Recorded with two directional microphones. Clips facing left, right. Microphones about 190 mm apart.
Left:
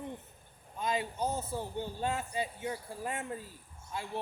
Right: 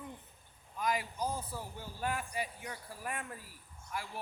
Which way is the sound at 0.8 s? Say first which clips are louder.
Left 2 dB; 25° left (ahead or behind).